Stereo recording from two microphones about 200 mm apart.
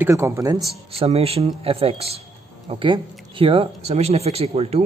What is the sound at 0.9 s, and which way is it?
Speech, 30° right (ahead or behind).